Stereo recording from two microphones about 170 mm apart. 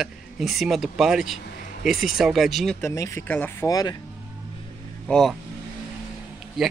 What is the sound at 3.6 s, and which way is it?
Speech, 20° left (ahead or behind).